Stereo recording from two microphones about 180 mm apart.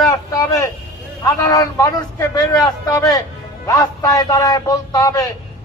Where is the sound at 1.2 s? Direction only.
20° left (ahead or behind).